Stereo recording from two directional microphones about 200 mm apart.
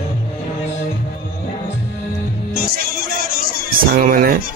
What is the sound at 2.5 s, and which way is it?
Music, 50° right (ahead or behind).